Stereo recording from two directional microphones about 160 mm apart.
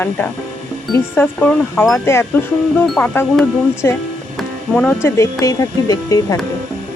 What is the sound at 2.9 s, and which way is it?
Speech, 5° left (ahead or behind).